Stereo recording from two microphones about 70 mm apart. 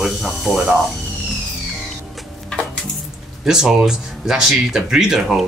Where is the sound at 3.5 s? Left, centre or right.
Centre.